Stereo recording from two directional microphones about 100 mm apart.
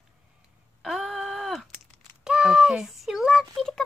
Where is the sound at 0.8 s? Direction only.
5° right (ahead or behind).